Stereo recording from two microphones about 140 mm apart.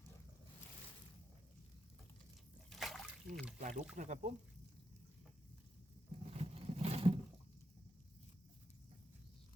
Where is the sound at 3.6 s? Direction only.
60° right (ahead or behind).